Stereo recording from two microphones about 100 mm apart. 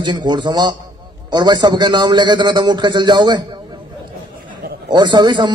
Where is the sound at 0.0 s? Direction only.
50° right (ahead or behind).